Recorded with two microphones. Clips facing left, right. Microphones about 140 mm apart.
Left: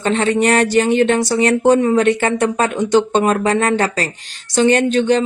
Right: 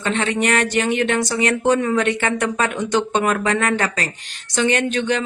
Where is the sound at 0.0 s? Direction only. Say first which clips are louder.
Left 5 dB; 35° left (ahead or behind).